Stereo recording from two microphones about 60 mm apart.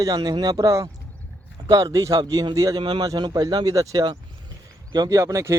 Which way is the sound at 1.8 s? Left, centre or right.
Right.